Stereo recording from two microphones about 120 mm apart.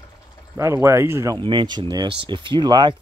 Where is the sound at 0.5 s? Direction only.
25° right (ahead or behind).